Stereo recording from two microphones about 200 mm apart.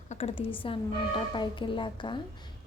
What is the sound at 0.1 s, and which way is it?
A woman's voice, 30° left (ahead or behind).